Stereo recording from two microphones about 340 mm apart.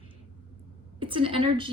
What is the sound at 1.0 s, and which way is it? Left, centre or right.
Speech, centre.